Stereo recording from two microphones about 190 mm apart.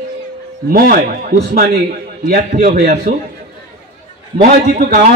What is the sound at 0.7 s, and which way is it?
Speech, 50° right (ahead or behind).